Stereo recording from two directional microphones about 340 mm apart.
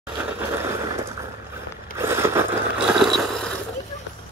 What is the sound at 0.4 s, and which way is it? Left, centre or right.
Vehicle, centre.